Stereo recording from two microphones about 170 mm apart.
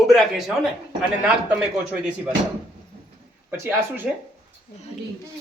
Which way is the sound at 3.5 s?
15° right (ahead or behind).